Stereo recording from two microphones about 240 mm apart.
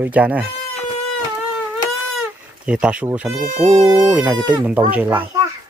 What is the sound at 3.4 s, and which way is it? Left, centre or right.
Speech, right.